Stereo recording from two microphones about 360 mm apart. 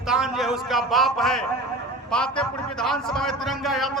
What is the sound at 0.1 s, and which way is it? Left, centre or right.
A man's voice, centre.